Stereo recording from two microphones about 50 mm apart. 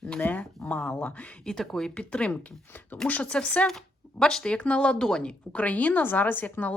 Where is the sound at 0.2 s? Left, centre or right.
Left.